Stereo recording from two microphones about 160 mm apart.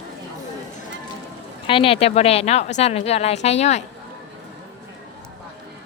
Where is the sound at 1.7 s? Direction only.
35° left (ahead or behind).